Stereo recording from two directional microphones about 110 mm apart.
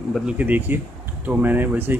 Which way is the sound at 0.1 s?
10° right (ahead or behind).